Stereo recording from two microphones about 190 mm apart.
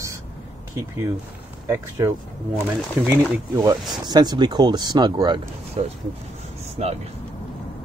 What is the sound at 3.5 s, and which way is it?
Speech, 20° right (ahead or behind).